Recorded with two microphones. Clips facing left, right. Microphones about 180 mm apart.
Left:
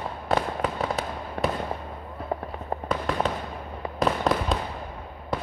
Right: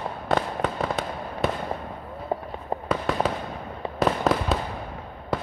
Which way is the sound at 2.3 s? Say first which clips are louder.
Right 2 dB; 20° right (ahead or behind).